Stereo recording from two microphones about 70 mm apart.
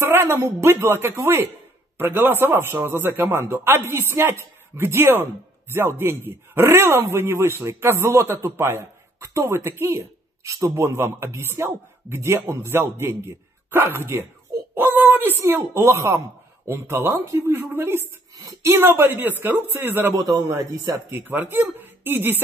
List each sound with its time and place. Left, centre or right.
0.2 s a man's voice: right
14.8 s a sound: right
15.3 s a man's voice: right
20.2 s a man's voice: right
20.8 s speech: right
21.2 s a man's voice: right